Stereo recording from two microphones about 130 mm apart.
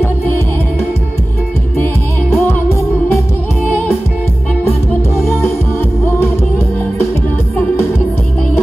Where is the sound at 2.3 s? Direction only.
20° left (ahead or behind).